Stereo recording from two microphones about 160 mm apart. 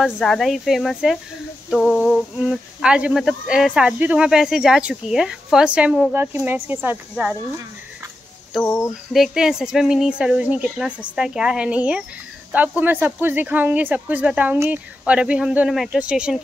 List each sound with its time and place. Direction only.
0.0 s speech: centre (ahead or behind)
8.6 s a sound: 15° left (ahead or behind)
9.1 s speech: centre (ahead or behind)